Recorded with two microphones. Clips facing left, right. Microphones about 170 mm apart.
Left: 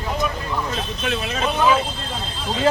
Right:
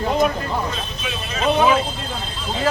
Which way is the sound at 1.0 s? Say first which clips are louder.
Left 7 dB; 65° left (ahead or behind).